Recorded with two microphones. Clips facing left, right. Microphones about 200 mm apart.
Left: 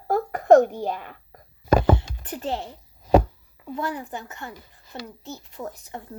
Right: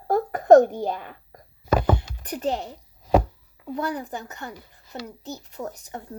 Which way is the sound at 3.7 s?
40° right (ahead or behind).